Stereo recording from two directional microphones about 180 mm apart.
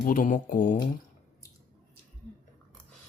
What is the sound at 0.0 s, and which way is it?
Speech, 45° left (ahead or behind).